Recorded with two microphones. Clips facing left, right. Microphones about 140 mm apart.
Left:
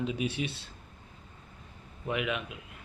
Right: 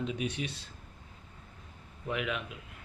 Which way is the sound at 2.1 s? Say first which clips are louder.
Left 2 dB; 5° left (ahead or behind).